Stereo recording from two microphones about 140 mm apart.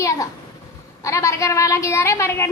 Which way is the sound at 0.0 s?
20° left (ahead or behind).